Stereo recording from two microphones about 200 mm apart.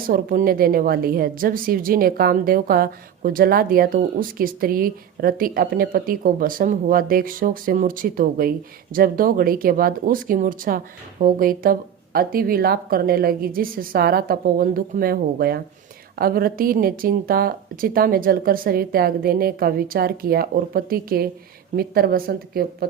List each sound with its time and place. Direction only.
0.1 s a woman's voice: 45° right (ahead or behind)